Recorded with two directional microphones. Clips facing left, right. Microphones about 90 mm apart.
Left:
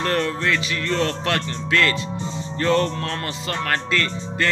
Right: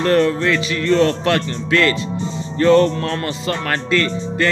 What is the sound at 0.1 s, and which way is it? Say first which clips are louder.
Music: right 9 dB; 20° right (ahead or behind).